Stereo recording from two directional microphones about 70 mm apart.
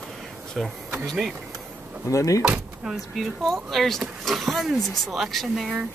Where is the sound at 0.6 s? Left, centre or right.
Centre.